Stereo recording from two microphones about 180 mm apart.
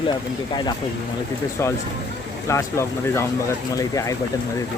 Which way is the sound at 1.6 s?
15° left (ahead or behind).